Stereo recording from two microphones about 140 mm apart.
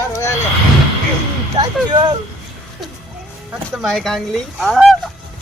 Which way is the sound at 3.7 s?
Centre (ahead or behind).